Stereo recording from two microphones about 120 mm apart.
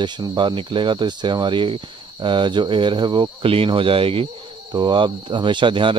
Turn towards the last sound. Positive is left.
turn(degrees=-45)  # may be behind; listen again after turning